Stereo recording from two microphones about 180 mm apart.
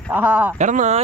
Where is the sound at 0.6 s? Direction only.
45° right (ahead or behind).